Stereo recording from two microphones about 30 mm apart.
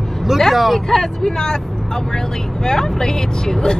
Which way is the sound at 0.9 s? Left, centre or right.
Centre.